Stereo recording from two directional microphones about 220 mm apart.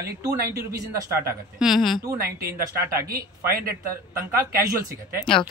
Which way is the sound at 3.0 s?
45° right (ahead or behind).